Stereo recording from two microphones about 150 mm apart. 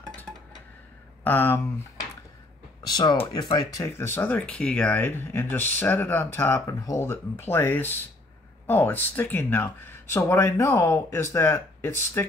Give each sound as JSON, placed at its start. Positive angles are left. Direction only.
{"t": 1.2, "sound": "speech", "side_deg": 15}
{"t": 2.9, "sound": "speech", "side_deg": 25}